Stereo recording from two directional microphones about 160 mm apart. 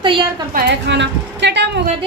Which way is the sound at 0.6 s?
90° right.